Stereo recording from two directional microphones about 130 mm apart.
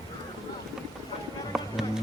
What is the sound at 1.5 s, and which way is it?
Music, 5° right (ahead or behind).